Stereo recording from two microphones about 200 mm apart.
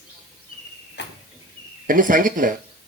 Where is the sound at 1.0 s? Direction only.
60° left (ahead or behind).